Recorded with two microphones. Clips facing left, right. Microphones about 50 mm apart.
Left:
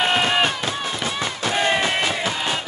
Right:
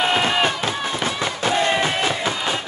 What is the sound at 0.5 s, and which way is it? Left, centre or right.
Run, right.